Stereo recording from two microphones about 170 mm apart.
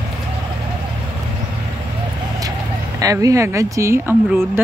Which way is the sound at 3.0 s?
20° right (ahead or behind).